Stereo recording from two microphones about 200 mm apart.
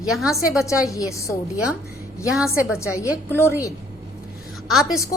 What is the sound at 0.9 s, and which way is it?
Speech, 15° left (ahead or behind).